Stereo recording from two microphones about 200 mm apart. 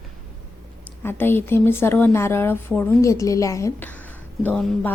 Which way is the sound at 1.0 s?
10° left (ahead or behind).